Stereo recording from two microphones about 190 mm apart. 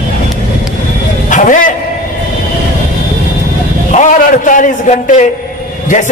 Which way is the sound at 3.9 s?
40° left (ahead or behind).